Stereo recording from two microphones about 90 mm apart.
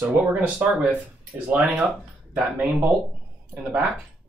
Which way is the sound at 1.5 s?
15° right (ahead or behind).